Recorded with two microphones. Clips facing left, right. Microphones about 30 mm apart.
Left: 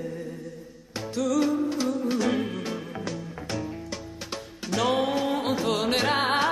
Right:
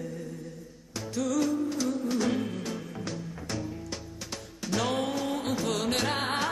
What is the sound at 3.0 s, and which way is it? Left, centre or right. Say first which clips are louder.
Music: left 3 dB; centre.